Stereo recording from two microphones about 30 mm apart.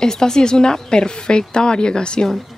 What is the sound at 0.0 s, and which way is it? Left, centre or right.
Speech, left.